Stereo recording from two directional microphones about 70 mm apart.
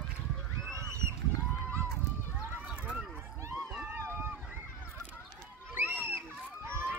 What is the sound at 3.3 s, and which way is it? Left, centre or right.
Run, right.